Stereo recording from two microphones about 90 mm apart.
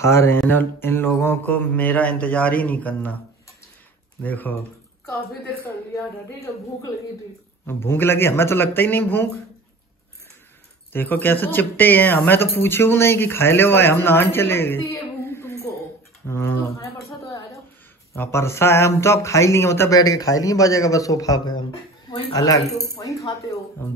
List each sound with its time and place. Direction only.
0.0 s speech: 30° left (ahead or behind)
4.2 s speech: 20° left (ahead or behind)
7.6 s speech: 25° left (ahead or behind)
10.9 s speech: 20° left (ahead or behind)
18.1 s speech: 25° left (ahead or behind)
19.9 s a man's voice: 40° left (ahead or behind)